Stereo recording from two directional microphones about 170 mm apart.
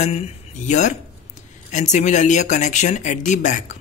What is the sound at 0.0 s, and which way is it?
Speech, 40° left (ahead or behind).